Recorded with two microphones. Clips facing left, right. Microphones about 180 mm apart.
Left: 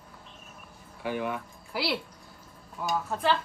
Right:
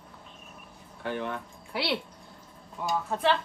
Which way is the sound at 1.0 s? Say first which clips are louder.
Left 1 dB; 10° left (ahead or behind).